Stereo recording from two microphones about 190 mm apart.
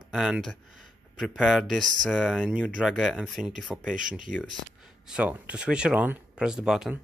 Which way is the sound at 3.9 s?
45° right (ahead or behind).